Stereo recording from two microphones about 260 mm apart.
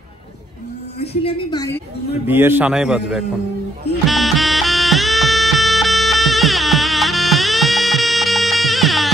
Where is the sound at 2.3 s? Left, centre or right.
Centre.